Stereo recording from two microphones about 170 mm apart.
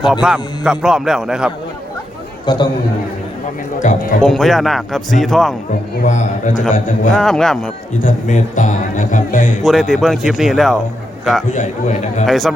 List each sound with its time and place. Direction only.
0.0 s a man's voice: 5° right (ahead or behind)
2.5 s a man's voice: 25° left (ahead or behind)
3.8 s speech: 50° left (ahead or behind)
4.2 s a man's voice: centre (ahead or behind)
6.0 s speech: 45° left (ahead or behind)
7.1 s a man's voice: 5° left (ahead or behind)
8.0 s speech: 45° left (ahead or behind)
9.6 s a man's voice: centre (ahead or behind)
11.5 s speech: 45° left (ahead or behind)
12.2 s a man's voice: centre (ahead or behind)